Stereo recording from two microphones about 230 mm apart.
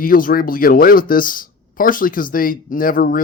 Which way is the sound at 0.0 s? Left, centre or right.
Left.